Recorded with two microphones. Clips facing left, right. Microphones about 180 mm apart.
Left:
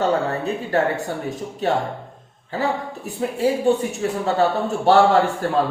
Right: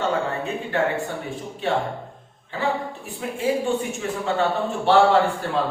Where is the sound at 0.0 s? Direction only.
40° left (ahead or behind).